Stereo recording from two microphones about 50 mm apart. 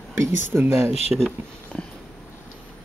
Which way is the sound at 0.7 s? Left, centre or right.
Right.